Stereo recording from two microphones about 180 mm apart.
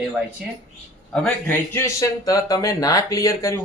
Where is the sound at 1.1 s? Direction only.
5° left (ahead or behind).